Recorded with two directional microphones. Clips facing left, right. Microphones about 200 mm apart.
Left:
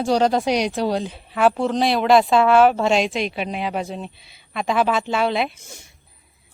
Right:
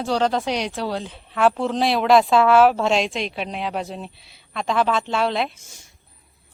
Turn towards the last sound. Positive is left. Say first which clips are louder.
# left 8 dB
turn(degrees=60)  # may be behind; listen again after turning